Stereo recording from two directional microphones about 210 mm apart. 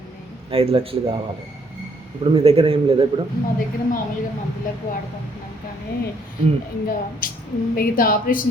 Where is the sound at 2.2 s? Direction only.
25° right (ahead or behind).